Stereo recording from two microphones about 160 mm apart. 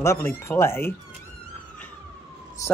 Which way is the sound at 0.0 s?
20° left (ahead or behind).